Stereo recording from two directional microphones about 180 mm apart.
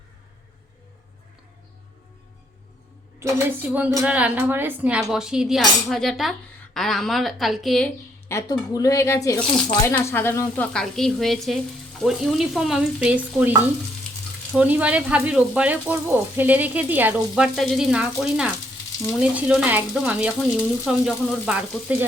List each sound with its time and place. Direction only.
3.2 s speech: 10° right (ahead or behind)
6.7 s stir: centre (ahead or behind)
8.3 s speech: 20° left (ahead or behind); by 11.6 s centre (ahead or behind)
12.0 s stir: centre (ahead or behind)
14.5 s speech: 10° right (ahead or behind)
19.0 s stir: 5° right (ahead or behind)
20.8 s speech: 5° right (ahead or behind)